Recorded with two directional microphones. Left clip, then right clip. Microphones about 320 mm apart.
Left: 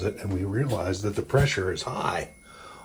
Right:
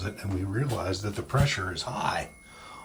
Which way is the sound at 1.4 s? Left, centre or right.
Centre.